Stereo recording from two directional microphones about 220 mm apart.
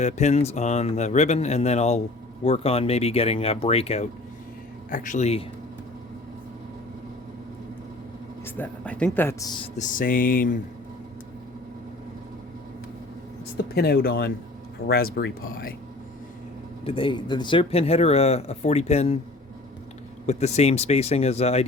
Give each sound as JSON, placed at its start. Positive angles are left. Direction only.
{"t": 0.0, "sound": "speech", "side_deg": 30}
{"t": 8.4, "sound": "speech", "side_deg": 10}
{"t": 9.7, "sound": "speech", "side_deg": 35}
{"t": 13.7, "sound": "speech", "side_deg": 45}
{"t": 16.8, "sound": "speech", "side_deg": 25}
{"t": 20.2, "sound": "speech", "side_deg": 30}